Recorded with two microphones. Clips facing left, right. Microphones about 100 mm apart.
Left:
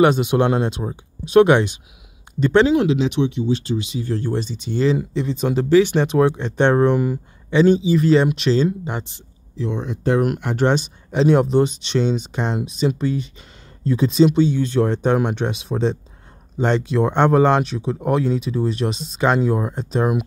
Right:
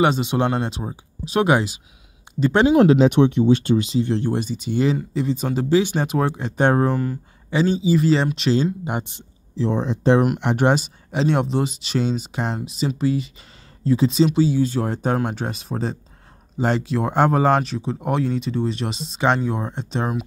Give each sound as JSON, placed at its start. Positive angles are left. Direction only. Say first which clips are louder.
{"t": 0.0, "sound": "speech", "louder": "left 3 dB", "side_deg": 0}
{"t": 2.7, "sound": "speech", "louder": "right 4 dB", "side_deg": -45}
{"t": 4.0, "sound": "speech", "louder": "right 2 dB", "side_deg": -20}
{"t": 5.7, "sound": "speech", "louder": "left 4 dB", "side_deg": -15}
{"t": 8.8, "sound": "speech", "louder": "right 1 dB", "side_deg": -15}
{"t": 9.6, "sound": "speech", "louder": "right 3 dB", "side_deg": -35}
{"t": 10.4, "sound": "speech", "louder": "even", "side_deg": -15}
{"t": 10.8, "sound": "speech", "louder": "left 4 dB", "side_deg": 0}